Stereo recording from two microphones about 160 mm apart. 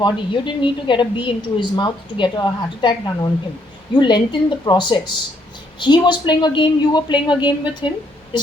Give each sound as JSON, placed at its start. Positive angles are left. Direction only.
{"t": 0.0, "sound": "a woman's voice", "side_deg": 30}